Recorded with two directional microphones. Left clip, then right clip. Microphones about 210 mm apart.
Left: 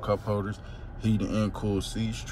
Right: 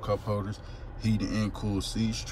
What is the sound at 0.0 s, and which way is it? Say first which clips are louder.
Speech: left 2 dB; 15° right (ahead or behind).